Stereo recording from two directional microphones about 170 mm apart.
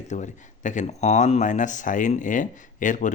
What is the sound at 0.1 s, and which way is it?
Speech, 45° left (ahead or behind).